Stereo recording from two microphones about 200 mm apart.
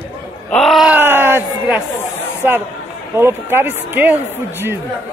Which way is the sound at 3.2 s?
10° right (ahead or behind).